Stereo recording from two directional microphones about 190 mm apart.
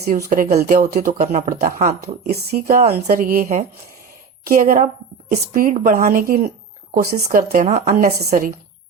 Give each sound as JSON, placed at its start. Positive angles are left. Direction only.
{"t": 0.3, "sound": "a woman's voice", "side_deg": -45}